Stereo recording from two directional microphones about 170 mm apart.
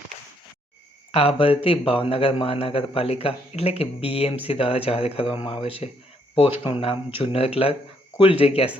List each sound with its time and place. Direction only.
1.1 s a man's voice: 35° left (ahead or behind)